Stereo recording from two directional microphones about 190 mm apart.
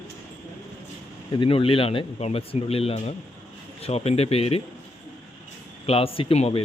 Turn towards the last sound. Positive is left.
turn(degrees=30)  # may be behind; listen again after turning